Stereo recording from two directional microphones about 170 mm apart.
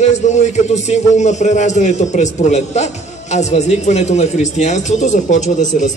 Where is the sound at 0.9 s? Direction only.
45° left (ahead or behind).